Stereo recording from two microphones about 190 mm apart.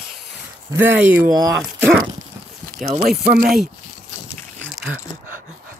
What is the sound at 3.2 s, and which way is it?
Speech, 50° right (ahead or behind).